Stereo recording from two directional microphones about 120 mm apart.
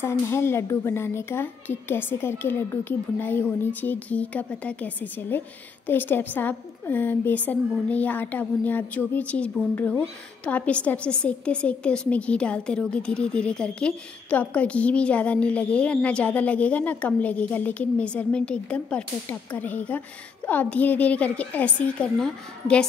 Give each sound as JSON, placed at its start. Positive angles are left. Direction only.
{"t": 0.0, "sound": "a woman's voice", "side_deg": 20}